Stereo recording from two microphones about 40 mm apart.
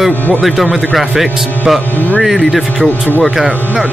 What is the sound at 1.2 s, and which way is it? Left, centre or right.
Speech, centre.